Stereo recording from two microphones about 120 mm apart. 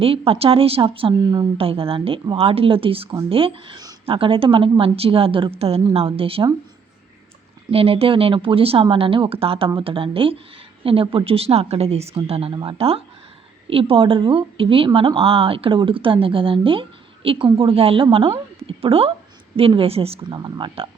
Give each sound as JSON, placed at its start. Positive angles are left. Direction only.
{"t": 0.0, "sound": "speech", "side_deg": -55}
{"t": 4.0, "sound": "speech", "side_deg": -50}
{"t": 7.7, "sound": "speech", "side_deg": -55}
{"t": 20.3, "sound": "speech", "side_deg": -35}